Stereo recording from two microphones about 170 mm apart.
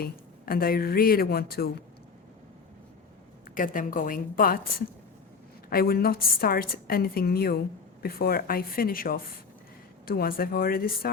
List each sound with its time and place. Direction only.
0.0 s a woman's voice: 60° left (ahead or behind)
3.5 s a woman's voice: 50° left (ahead or behind)
5.6 s a woman's voice: 60° left (ahead or behind)